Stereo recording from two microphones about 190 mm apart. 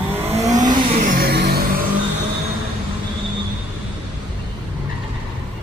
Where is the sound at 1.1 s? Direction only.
55° right (ahead or behind).